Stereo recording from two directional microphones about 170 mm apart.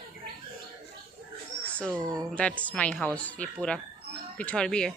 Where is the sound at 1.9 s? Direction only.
20° right (ahead or behind).